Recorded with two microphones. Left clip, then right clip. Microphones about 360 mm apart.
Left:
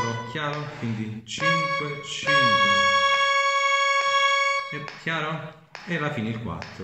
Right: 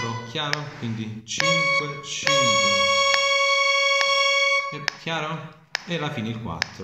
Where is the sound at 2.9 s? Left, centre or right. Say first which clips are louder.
Even; right.